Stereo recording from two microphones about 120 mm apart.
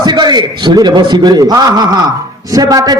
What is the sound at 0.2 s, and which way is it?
A man's voice, 35° right (ahead or behind).